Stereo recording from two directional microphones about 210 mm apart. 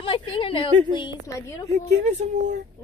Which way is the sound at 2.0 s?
35° right (ahead or behind).